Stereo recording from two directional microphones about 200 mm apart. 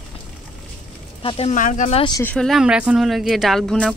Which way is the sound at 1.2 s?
30° left (ahead or behind).